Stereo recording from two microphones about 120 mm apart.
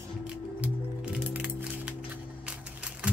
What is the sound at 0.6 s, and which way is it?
Music, 10° right (ahead or behind).